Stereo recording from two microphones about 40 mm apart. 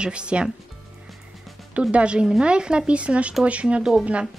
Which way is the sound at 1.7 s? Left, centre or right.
Right.